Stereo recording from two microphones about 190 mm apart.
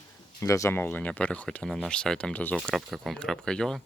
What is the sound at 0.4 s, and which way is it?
Speech, 15° left (ahead or behind).